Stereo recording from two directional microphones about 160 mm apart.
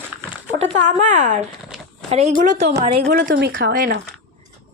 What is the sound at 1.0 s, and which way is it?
Speech, 55° right (ahead or behind).